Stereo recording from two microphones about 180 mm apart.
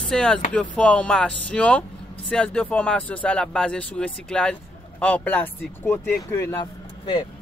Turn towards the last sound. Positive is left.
turn(degrees=25)  # may be behind; listen again after turning